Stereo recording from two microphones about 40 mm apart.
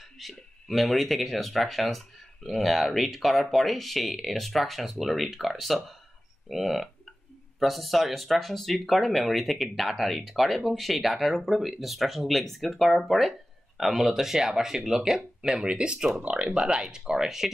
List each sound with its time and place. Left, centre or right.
0.2 s speech: centre
15.6 s speech: right